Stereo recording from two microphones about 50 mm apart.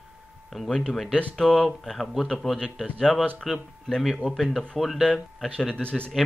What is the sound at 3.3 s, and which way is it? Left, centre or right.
Speech, centre.